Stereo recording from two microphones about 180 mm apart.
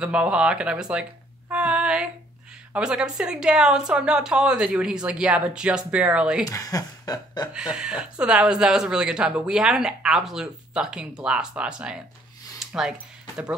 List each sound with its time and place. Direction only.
0.0 s speech: 5° right (ahead or behind)
1.5 s female singing: 5° right (ahead or behind)
2.7 s speech: 5° right (ahead or behind)
6.4 s speech: 20° left (ahead or behind)
7.5 s speech: 5° right (ahead or behind)
12.5 s a sound: centre (ahead or behind)